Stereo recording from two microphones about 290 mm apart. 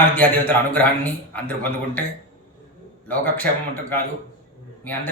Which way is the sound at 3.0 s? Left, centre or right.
Centre.